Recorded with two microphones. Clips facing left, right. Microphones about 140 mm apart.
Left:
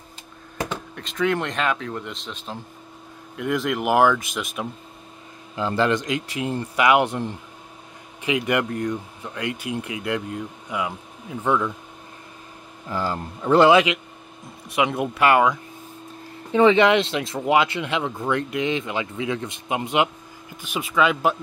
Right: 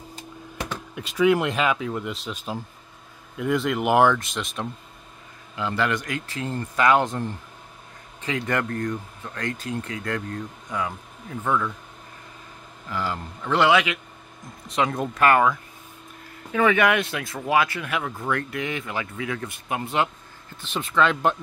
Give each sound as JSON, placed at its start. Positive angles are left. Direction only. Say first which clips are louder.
{"t": 0.9, "sound": "speech", "louder": "right 4 dB", "side_deg": -10}
{"t": 5.6, "sound": "speech", "louder": "left 4 dB", "side_deg": 30}
{"t": 12.9, "sound": "speech", "louder": "left 3 dB", "side_deg": 35}
{"t": 14.8, "sound": "speech", "louder": "left 1 dB", "side_deg": 15}